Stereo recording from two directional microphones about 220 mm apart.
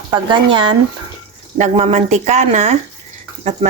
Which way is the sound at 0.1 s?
20° right (ahead or behind).